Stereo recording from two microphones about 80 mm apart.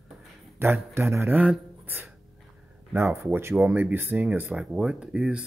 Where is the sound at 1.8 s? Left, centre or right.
Right.